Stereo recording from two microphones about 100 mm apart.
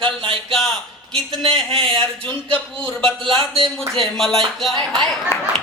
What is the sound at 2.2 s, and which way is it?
Speech, 15° left (ahead or behind).